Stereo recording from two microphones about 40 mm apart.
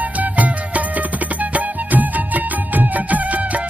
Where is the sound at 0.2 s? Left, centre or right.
Right.